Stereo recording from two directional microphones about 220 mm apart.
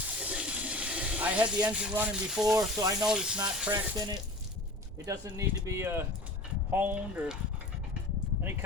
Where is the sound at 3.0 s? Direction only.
5° right (ahead or behind).